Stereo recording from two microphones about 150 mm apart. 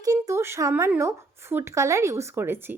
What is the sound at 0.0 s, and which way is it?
Speech, 20° right (ahead or behind).